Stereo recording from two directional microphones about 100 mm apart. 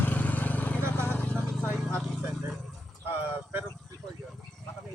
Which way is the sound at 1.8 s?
5° left (ahead or behind).